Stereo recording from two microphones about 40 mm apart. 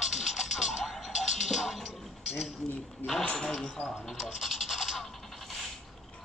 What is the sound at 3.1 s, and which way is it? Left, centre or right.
Speech, centre.